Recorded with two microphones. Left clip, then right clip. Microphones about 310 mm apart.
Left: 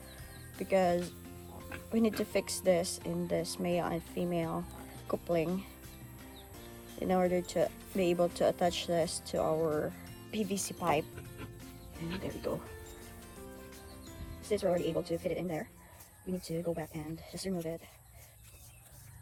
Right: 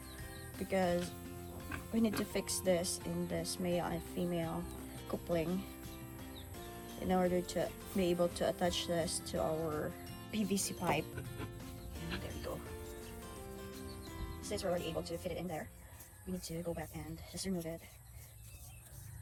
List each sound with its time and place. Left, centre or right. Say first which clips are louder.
0.6 s speech: left 6 dB; left
7.1 s speech: left 4 dB; left
12.5 s speech: left 8 dB; left
14.4 s speech: left 7 dB; left